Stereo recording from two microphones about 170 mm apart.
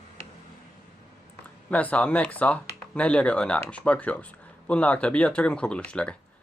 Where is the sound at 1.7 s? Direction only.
10° left (ahead or behind).